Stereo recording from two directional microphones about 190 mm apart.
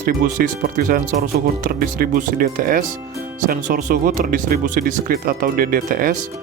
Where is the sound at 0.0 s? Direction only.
45° right (ahead or behind).